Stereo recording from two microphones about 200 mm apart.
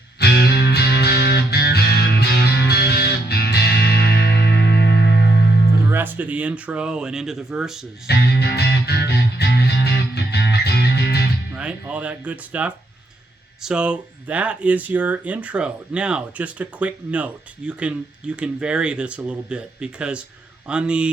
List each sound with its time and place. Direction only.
0.2 s music: 55° left (ahead or behind)
5.9 s speech: 10° right (ahead or behind)
8.0 s music: 55° left (ahead or behind)
11.5 s speech: 5° right (ahead or behind)